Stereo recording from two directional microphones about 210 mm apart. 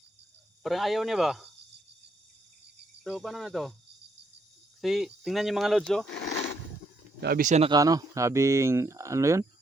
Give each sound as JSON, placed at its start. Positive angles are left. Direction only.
{"t": 0.6, "sound": "speech", "side_deg": 0}
{"t": 3.0, "sound": "speech", "side_deg": 0}
{"t": 4.8, "sound": "speech", "side_deg": 0}
{"t": 7.2, "sound": "speech", "side_deg": -45}
{"t": 7.7, "sound": "speech", "side_deg": -15}